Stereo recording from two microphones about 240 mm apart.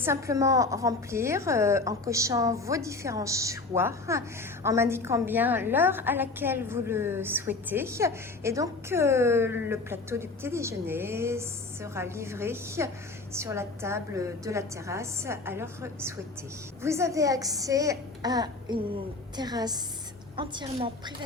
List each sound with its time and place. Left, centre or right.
0.0 s a woman's voice: centre